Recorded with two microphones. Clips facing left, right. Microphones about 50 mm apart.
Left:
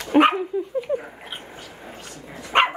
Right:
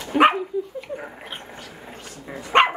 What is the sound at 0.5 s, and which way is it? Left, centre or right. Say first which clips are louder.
Dog: left 1 dB; left.